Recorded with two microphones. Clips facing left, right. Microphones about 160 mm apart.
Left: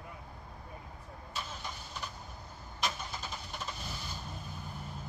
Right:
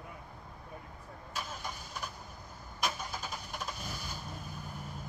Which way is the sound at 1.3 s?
10° right (ahead or behind).